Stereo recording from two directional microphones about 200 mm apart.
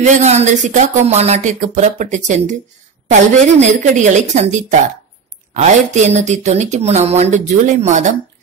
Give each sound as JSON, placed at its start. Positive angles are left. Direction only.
{"t": 0.0, "sound": "speech", "side_deg": -35}